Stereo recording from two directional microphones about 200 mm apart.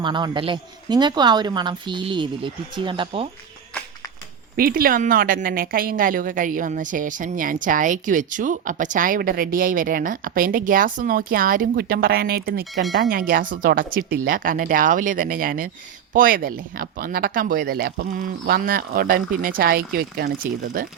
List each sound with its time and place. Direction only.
0.0 s a woman's voice: 25° right (ahead or behind)
4.5 s a woman's voice: 45° right (ahead or behind)